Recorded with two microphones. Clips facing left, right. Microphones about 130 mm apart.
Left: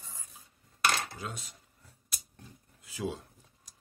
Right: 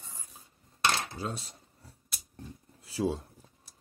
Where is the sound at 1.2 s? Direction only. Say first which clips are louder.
Right 5 dB; 35° right (ahead or behind).